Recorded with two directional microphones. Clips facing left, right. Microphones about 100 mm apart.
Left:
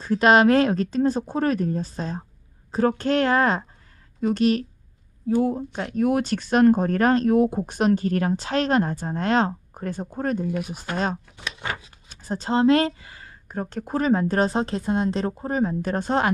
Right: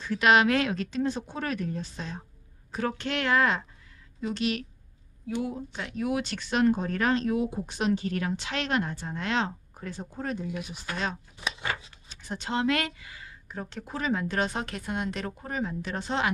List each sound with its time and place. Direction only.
0.0 s speech: 35° left (ahead or behind)